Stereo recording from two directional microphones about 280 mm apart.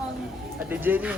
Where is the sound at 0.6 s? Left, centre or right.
Centre.